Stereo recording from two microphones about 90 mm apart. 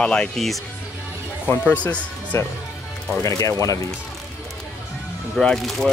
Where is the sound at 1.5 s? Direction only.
20° left (ahead or behind).